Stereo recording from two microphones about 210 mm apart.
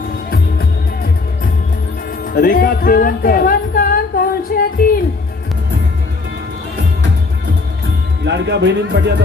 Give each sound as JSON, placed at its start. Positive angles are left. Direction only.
{"t": 2.2, "sound": "music", "side_deg": 45}
{"t": 8.2, "sound": "speech", "side_deg": -50}